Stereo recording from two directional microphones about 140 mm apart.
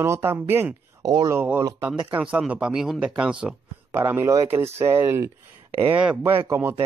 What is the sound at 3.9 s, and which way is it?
Speech, 15° right (ahead or behind).